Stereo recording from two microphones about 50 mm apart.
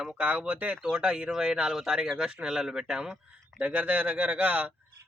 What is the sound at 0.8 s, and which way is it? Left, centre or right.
Speech, centre.